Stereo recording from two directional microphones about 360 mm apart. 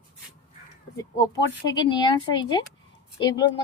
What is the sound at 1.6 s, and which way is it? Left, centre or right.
A woman's voice, centre.